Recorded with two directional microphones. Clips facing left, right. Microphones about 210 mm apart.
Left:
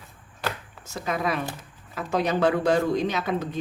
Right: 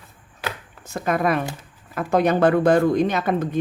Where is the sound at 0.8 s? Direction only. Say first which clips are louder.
Right 6 dB; 55° right (ahead or behind).